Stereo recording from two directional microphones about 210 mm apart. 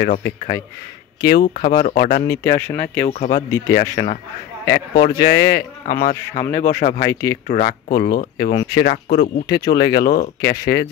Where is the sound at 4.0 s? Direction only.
40° left (ahead or behind).